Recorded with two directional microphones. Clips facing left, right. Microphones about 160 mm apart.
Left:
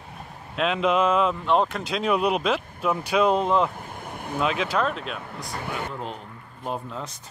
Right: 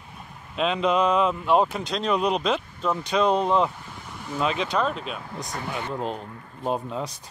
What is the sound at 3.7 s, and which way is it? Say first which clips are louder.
Vehicle: left 4 dB; 50° left (ahead or behind).